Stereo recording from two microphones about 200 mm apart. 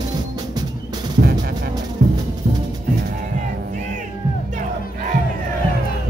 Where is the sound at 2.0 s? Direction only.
40° right (ahead or behind).